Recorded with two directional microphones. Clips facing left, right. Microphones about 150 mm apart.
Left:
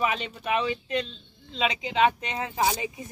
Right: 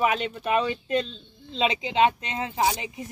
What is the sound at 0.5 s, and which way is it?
Speech, 40° right (ahead or behind).